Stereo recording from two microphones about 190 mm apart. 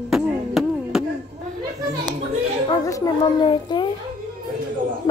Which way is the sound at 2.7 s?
20° left (ahead or behind).